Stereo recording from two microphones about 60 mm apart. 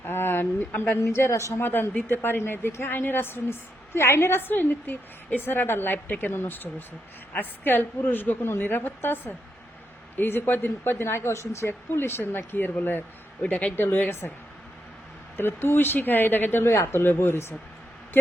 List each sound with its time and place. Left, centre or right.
0.0 s a sound: left
0.9 s a woman's voice: left
1.6 s a woman's voice: left
13.4 s speech: centre
13.7 s a woman's voice: left
15.4 s a woman's voice: left